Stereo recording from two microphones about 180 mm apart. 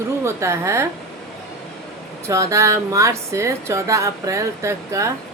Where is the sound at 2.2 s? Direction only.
15° right (ahead or behind).